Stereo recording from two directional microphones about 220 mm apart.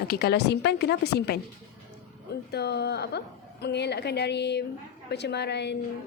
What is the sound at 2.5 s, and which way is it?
Speech, 50° left (ahead or behind).